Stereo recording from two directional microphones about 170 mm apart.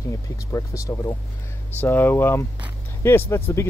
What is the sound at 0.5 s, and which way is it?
Speech, 20° left (ahead or behind).